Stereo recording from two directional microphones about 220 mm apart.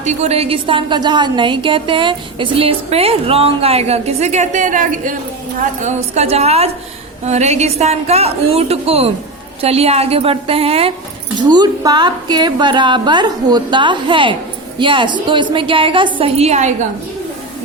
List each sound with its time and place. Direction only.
0.0 s a woman's voice: 30° right (ahead or behind)